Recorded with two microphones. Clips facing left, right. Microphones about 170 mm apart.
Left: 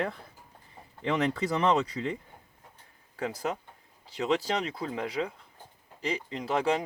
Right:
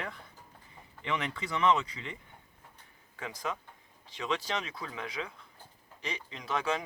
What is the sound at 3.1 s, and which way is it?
Speech, 35° left (ahead or behind).